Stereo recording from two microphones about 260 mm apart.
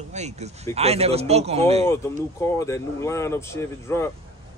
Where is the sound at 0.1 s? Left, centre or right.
Right.